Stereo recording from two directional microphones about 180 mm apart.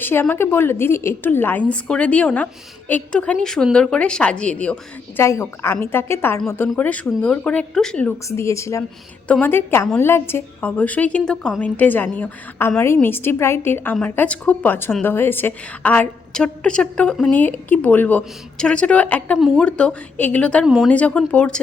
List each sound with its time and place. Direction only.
0.0 s a woman's voice: 10° left (ahead or behind)
8.3 s a woman's voice: 15° left (ahead or behind)